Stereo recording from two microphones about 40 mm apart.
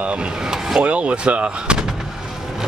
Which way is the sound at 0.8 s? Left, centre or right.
Right.